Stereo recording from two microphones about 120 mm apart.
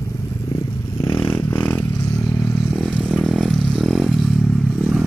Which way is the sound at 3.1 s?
Centre (ahead or behind).